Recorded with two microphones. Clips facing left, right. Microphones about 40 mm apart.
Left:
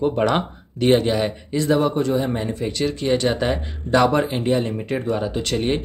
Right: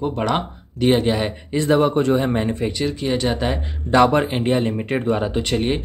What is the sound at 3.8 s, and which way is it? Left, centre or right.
Speech, centre.